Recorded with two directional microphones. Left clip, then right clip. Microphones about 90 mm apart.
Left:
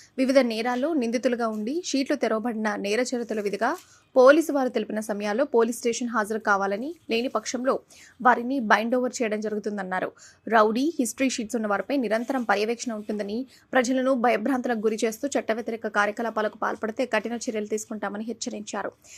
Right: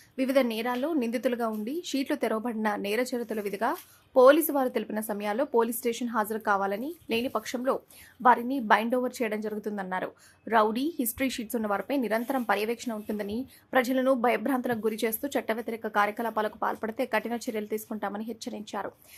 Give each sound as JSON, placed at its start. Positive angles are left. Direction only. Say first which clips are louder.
{"t": 0.2, "sound": "a woman's voice", "louder": "left 4 dB", "side_deg": 45}
{"t": 17.3, "sound": "a woman's voice", "louder": "left 3 dB", "side_deg": 20}